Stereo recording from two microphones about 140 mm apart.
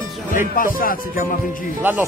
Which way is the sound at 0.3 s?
70° left (ahead or behind).